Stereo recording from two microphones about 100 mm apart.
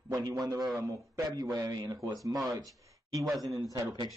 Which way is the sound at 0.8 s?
35° right (ahead or behind).